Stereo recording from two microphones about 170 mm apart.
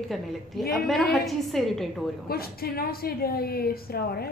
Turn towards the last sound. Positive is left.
turn(degrees=65)  # may be behind; listen again after turning